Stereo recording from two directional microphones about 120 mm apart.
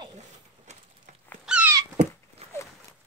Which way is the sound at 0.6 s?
75° right (ahead or behind).